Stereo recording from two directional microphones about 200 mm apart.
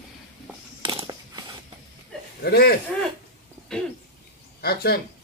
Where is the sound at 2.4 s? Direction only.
50° left (ahead or behind).